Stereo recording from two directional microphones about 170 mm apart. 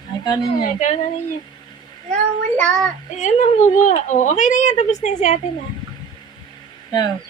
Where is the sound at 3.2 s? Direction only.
45° left (ahead or behind).